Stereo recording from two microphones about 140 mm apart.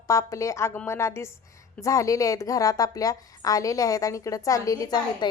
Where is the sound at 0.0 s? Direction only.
20° left (ahead or behind).